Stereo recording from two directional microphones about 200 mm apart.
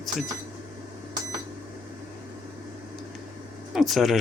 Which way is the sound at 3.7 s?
Centre (ahead or behind).